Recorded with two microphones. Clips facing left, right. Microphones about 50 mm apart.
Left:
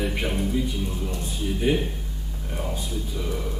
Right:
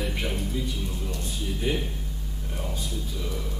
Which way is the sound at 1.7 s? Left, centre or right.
Centre.